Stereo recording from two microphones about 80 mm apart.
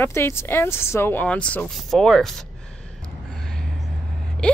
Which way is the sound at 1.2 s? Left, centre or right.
Centre.